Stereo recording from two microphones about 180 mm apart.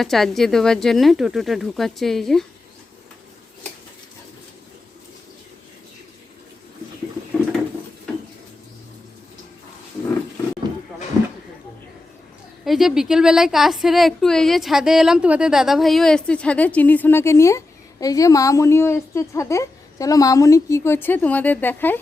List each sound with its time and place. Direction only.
0.0 s a woman's voice: centre (ahead or behind)
12.6 s a woman's voice: centre (ahead or behind)